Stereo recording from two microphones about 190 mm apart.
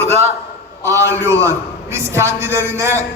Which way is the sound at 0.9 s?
15° right (ahead or behind).